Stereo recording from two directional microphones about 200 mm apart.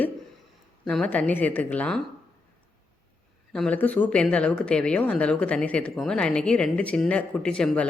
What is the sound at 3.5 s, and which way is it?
Speech, 5° left (ahead or behind).